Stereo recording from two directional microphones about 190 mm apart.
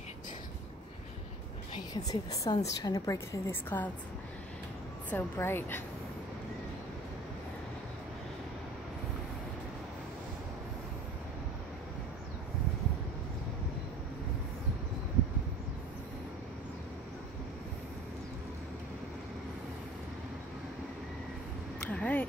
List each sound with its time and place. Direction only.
1.7 s a woman's voice: 20° left (ahead or behind)
5.1 s speech: 10° left (ahead or behind)
21.8 s a sound: 5° left (ahead or behind)